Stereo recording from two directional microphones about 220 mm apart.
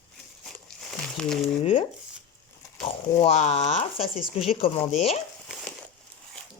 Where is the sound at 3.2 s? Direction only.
30° left (ahead or behind).